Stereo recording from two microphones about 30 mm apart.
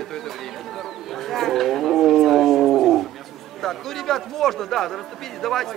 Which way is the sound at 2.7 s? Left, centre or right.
Centre.